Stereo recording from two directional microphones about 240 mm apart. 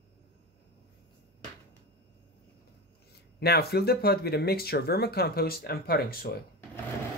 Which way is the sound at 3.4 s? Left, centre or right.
Left.